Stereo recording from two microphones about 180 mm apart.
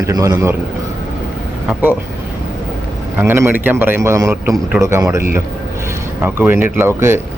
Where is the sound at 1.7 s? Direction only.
10° right (ahead or behind).